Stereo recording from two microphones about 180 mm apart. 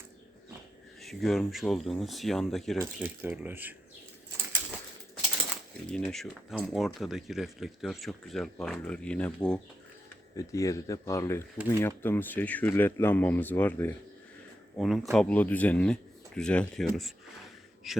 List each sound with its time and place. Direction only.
1.0 s speech: centre (ahead or behind)
3.0 s speech: 10° right (ahead or behind)
5.9 s speech: centre (ahead or behind)
10.3 s speech: 20° left (ahead or behind)
14.8 s speech: centre (ahead or behind)